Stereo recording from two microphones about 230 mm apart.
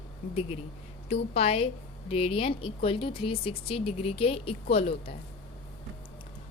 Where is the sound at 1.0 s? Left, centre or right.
Left.